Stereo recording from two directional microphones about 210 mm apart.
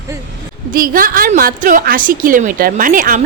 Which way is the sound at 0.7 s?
40° right (ahead or behind).